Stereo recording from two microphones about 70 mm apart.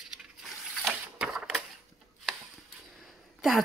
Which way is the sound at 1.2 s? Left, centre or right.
Centre.